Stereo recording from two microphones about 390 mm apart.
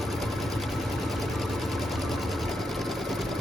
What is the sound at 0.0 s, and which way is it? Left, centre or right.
Sewing machine, centre.